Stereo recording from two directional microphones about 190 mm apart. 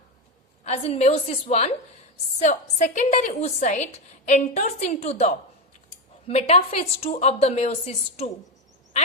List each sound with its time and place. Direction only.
0.6 s a woman's voice: 30° left (ahead or behind)
6.2 s a woman's voice: 35° left (ahead or behind)